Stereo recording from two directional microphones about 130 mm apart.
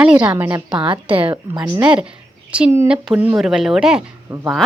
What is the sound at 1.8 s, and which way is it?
Speech, 10° right (ahead or behind).